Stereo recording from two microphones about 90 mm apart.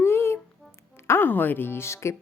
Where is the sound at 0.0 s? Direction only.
25° left (ahead or behind).